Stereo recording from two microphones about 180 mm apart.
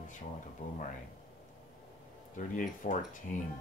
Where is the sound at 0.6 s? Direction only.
30° left (ahead or behind).